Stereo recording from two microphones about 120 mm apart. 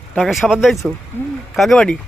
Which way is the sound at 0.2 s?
Centre (ahead or behind).